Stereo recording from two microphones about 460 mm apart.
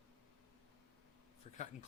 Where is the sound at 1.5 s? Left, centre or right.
Centre.